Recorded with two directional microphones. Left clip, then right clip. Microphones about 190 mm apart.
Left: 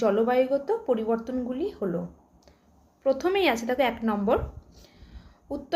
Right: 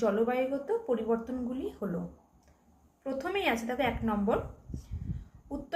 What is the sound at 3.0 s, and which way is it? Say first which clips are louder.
A woman's voice: left 8 dB; 60° left (ahead or behind).